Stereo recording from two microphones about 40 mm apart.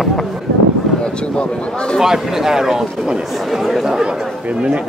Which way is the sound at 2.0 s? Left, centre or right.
Centre.